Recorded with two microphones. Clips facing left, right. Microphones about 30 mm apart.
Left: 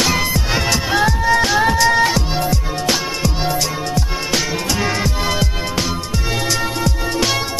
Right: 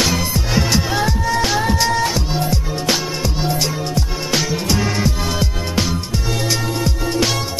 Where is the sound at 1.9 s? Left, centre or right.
Left.